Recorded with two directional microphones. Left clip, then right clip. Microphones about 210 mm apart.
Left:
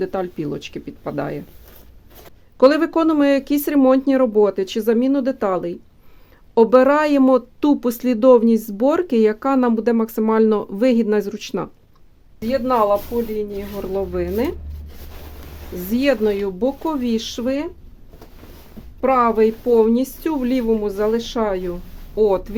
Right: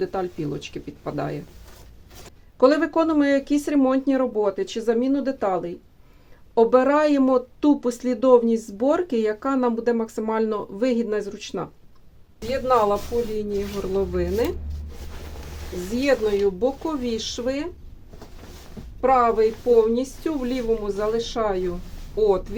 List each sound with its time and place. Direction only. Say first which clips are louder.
0.0 s speech: left 3 dB; 45° left (ahead or behind)
2.6 s speech: left 4 dB; 55° left (ahead or behind)
16.0 s speech: left 2 dB; 50° left (ahead or behind)
19.0 s speech: left 2 dB; 50° left (ahead or behind)